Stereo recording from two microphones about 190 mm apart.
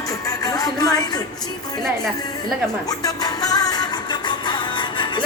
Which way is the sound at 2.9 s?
20° left (ahead or behind).